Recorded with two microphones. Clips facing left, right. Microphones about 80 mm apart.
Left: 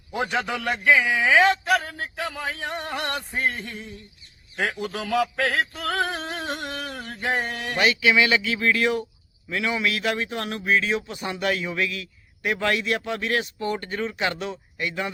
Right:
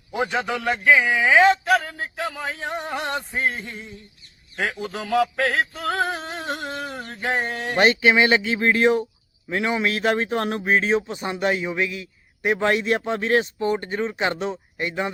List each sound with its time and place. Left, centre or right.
0.1 s a man's voice: centre
6.7 s a sound: centre
7.1 s a man's voice: centre
7.8 s a man's voice: right